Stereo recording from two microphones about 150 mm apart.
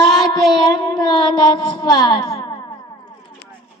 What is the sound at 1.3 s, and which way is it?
Child singing, 30° left (ahead or behind).